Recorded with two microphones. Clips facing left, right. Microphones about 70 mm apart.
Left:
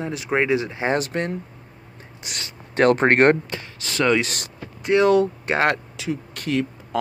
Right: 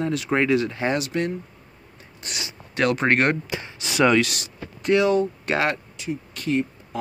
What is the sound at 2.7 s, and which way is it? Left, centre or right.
Speech, left.